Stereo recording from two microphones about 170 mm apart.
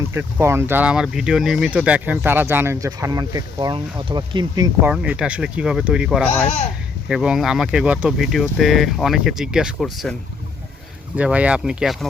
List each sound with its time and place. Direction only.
0.1 s speech: 15° right (ahead or behind)
4.8 s speech: 10° right (ahead or behind)
11.2 s speech: 5° right (ahead or behind)